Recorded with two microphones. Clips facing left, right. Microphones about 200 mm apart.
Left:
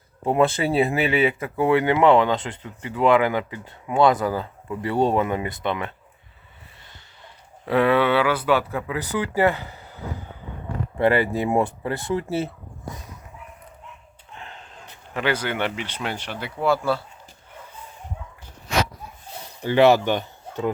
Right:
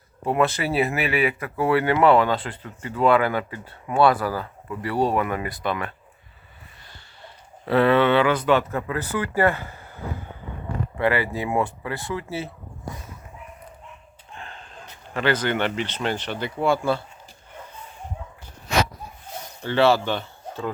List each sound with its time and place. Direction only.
0.3 s speech: 25° left (ahead or behind)
7.6 s speech: 10° left (ahead or behind)
11.0 s speech: 20° left (ahead or behind)
14.3 s gasp: 20° left (ahead or behind)
15.1 s speech: 10° left (ahead or behind)
19.6 s speech: 15° left (ahead or behind)